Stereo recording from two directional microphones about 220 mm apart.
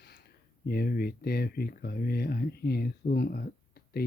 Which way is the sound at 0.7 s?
45° left (ahead or behind).